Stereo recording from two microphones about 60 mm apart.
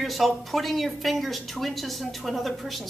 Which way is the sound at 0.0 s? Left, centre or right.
Centre.